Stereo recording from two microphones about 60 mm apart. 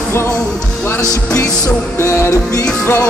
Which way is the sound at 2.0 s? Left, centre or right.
Left.